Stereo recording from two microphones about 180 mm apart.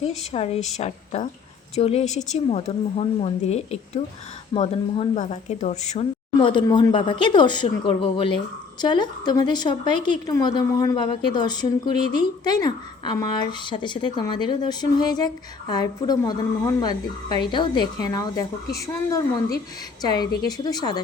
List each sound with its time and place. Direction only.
0.3 s a woman's voice: 35° left (ahead or behind)